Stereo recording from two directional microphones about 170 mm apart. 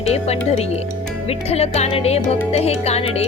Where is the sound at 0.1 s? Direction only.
40° left (ahead or behind).